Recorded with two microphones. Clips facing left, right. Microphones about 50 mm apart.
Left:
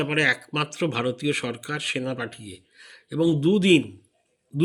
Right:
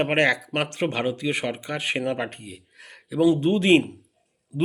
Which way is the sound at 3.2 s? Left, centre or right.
Right.